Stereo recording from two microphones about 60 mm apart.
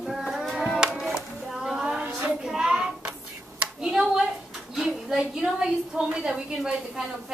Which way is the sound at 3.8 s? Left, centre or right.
Centre.